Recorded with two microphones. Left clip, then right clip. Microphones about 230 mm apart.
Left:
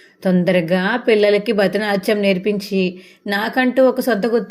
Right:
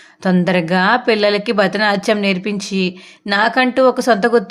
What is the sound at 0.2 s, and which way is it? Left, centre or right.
Speech, right.